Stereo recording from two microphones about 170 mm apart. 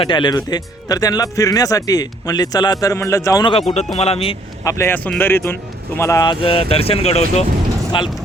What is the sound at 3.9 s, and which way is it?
Speech, 35° left (ahead or behind).